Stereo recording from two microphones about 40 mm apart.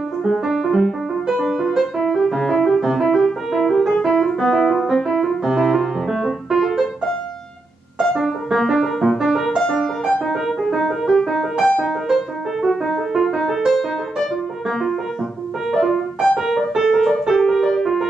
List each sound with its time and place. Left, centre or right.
0.2 s music: centre
1.8 s music: centre
4.0 s piano: centre
4.3 s music: centre
8.0 s music: centre
9.6 s music: centre
14.7 s music: centre
16.3 s keyboard: centre
17.3 s music: centre